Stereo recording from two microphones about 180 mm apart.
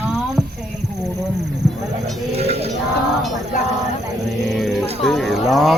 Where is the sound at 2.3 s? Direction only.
35° right (ahead or behind).